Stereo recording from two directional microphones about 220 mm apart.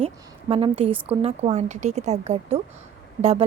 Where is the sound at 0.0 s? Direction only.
25° right (ahead or behind).